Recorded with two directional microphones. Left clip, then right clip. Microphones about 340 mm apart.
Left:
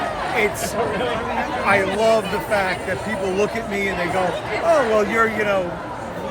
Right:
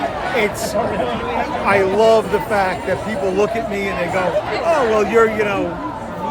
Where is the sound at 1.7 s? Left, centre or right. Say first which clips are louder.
Right 4 dB; centre.